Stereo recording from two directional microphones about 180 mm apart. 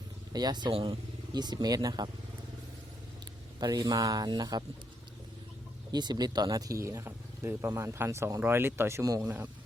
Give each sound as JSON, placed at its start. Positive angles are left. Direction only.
{"t": 0.3, "sound": "speech", "side_deg": -25}
{"t": 3.6, "sound": "speech", "side_deg": -20}
{"t": 5.9, "sound": "speech", "side_deg": -25}